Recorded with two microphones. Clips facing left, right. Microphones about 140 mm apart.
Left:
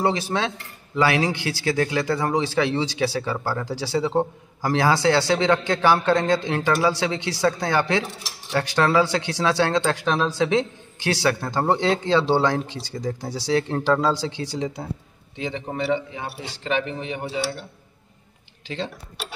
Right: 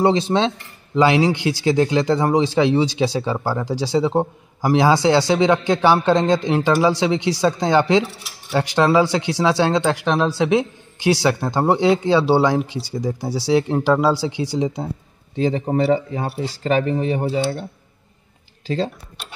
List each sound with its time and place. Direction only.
0.0 s speech: 20° right (ahead or behind)
15.3 s speech: 35° right (ahead or behind)